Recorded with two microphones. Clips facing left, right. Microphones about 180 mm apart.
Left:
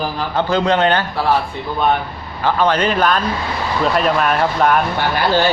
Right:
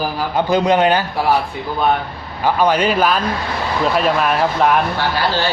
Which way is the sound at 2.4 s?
10° right (ahead or behind).